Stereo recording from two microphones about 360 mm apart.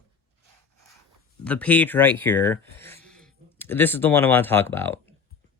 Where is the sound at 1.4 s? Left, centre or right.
Centre.